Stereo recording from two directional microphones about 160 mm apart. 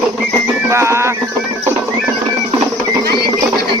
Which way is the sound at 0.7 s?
15° right (ahead or behind).